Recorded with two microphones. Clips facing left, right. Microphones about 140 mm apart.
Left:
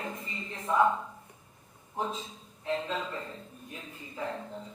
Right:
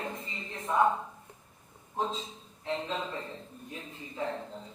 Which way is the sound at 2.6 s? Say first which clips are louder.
Left 1 dB; 25° right (ahead or behind).